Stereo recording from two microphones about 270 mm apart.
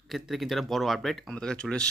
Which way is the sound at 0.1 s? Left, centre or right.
Centre.